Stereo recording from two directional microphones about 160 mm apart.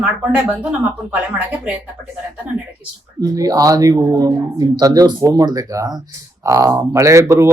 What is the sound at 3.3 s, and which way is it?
A woman's voice, 20° right (ahead or behind).